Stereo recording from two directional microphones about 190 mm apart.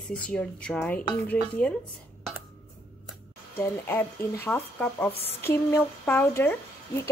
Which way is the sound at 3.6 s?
10° left (ahead or behind).